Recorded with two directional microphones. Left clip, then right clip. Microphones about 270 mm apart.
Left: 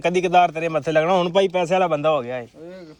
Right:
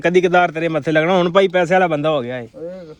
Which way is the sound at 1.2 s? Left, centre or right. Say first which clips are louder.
Right 5 dB; right.